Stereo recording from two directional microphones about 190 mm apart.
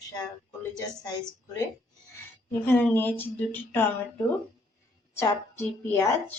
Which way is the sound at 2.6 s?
10° left (ahead or behind).